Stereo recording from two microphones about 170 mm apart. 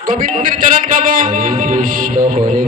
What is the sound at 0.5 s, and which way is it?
Speech, 55° right (ahead or behind).